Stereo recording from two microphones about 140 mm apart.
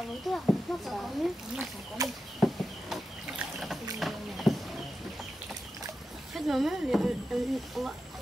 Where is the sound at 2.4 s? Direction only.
Centre (ahead or behind).